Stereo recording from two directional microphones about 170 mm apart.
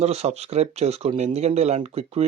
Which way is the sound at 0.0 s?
40° right (ahead or behind).